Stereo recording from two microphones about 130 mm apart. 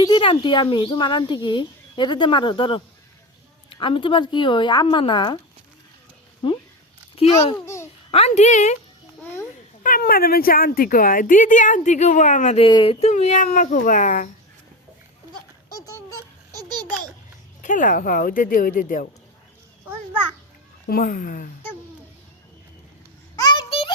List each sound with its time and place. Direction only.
0.0 s speech: 40° left (ahead or behind)
7.5 s a child's voice: 20° left (ahead or behind)
8.1 s a woman's voice: 55° left (ahead or behind)
9.8 s speech: 90° left; by 12.5 s 70° left (ahead or behind)
12.5 s speech: 40° left (ahead or behind); by 14.3 s 90° left
16.5 s baby laughter: 30° right (ahead or behind)
17.6 s speech: 80° left
21.0 s speech: 90° left
23.3 s a sound: 30° left (ahead or behind)
23.6 s music: 45° left (ahead or behind)